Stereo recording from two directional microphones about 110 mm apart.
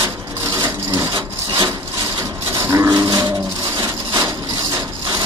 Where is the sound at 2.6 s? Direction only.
25° right (ahead or behind).